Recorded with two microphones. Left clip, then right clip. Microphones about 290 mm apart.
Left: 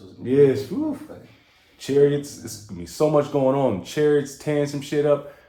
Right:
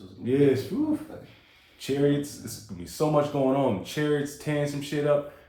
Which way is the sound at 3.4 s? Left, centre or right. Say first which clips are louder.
Left 4 dB; left.